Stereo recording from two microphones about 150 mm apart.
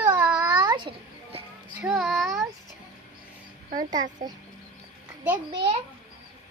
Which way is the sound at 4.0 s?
55° right (ahead or behind).